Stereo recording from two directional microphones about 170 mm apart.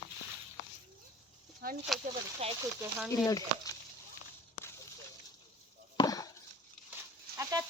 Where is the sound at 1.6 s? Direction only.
60° right (ahead or behind).